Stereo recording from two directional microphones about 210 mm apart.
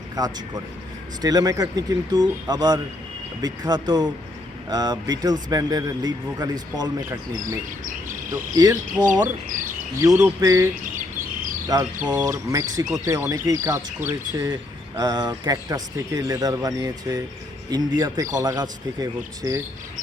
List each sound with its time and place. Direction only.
0.2 s speech: 20° right (ahead or behind)
8.5 s speech: 15° right (ahead or behind)
9.5 s speech: 40° right (ahead or behind)
10.0 s speech: 10° right (ahead or behind)
11.7 s speech: 20° right (ahead or behind)